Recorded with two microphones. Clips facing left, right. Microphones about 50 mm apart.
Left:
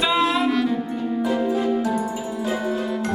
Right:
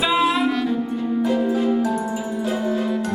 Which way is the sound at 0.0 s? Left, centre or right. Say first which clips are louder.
Right 1 dB; centre.